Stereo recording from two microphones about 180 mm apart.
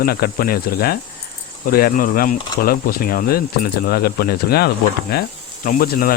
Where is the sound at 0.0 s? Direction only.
55° left (ahead or behind).